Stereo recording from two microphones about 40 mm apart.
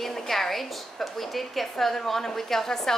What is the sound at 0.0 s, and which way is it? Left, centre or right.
A woman's voice, centre.